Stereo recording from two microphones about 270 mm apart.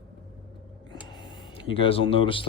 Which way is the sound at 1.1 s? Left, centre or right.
Centre.